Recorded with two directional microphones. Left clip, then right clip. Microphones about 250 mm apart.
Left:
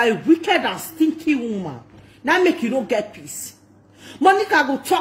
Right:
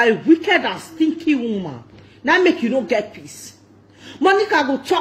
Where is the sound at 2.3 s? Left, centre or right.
Left.